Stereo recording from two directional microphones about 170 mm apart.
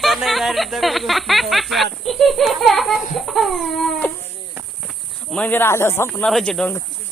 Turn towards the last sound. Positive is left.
turn(degrees=5)  # may be behind; listen again after turning